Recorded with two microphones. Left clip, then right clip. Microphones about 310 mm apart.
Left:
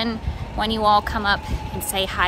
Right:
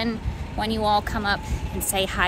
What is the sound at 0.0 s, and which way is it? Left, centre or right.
Speech, centre.